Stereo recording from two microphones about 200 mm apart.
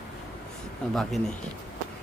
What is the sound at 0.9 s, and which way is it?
Speech, centre (ahead or behind).